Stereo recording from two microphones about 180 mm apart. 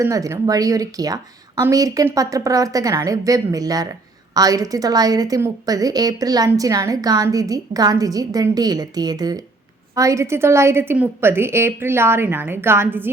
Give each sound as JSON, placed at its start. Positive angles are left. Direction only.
{"t": 0.0, "sound": "a woman's voice", "side_deg": -20}